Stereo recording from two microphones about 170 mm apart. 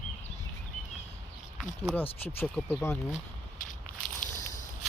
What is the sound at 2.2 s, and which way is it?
Speech, 10° left (ahead or behind).